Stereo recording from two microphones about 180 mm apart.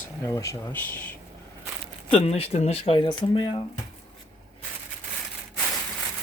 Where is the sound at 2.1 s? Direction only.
35° left (ahead or behind).